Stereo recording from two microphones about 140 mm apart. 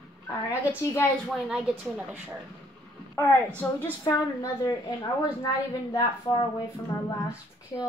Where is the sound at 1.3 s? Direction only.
5° right (ahead or behind).